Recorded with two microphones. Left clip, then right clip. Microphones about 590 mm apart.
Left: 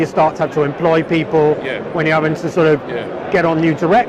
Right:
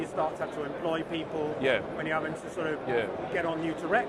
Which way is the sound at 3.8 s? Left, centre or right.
Left.